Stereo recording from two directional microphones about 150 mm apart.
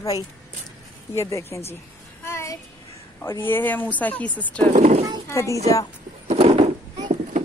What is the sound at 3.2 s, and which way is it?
Speech, 15° left (ahead or behind).